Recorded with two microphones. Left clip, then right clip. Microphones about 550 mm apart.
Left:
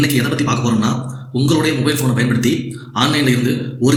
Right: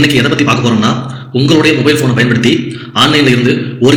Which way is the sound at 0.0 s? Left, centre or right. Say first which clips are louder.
Right 8 dB; left.